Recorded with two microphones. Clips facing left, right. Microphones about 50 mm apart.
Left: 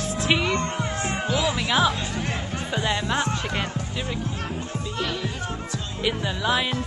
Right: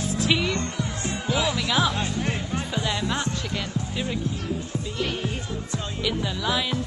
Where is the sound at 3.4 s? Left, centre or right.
Left.